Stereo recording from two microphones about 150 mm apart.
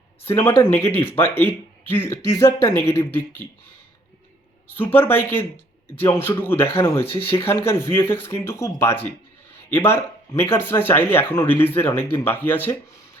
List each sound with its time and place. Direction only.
0.3 s speech: 15° left (ahead or behind)
4.8 s speech: 15° left (ahead or behind)